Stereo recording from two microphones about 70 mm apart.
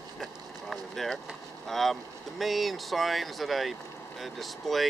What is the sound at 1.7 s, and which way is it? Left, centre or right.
Speech, centre.